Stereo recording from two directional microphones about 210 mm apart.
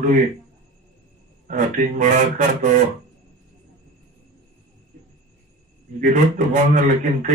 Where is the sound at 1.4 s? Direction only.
35° right (ahead or behind).